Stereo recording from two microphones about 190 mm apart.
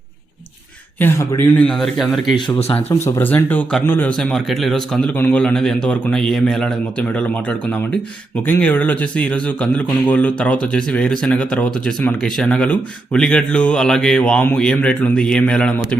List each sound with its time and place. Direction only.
0.9 s speech: 15° left (ahead or behind)
2.3 s speech: 30° left (ahead or behind)
3.2 s a man's voice: 10° left (ahead or behind)